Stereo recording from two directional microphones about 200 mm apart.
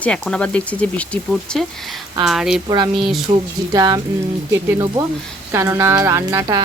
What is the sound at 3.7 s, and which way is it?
Speech, 20° right (ahead or behind).